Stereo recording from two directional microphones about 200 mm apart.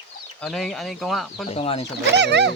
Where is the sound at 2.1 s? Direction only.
60° right (ahead or behind).